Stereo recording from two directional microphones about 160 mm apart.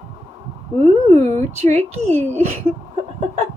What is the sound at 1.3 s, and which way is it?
Speech, 40° right (ahead or behind).